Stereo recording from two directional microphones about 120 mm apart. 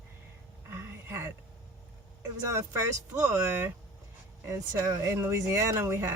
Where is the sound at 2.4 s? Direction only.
25° right (ahead or behind).